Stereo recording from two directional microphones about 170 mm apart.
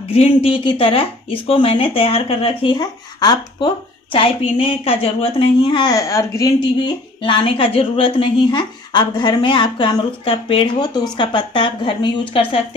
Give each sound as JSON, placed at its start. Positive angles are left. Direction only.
{"t": 0.1, "sound": "speech", "side_deg": 35}
{"t": 7.2, "sound": "a woman's voice", "side_deg": 30}